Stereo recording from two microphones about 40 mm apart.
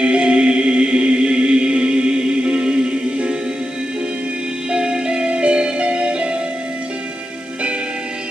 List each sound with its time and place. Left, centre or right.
0.0 s music: right
4.6 s music: right